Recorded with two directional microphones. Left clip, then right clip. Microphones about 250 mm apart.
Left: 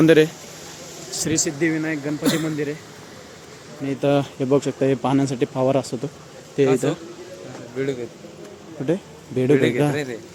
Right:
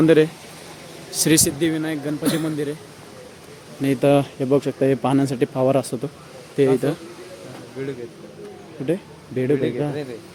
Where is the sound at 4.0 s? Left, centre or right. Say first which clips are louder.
Right 2 dB; centre.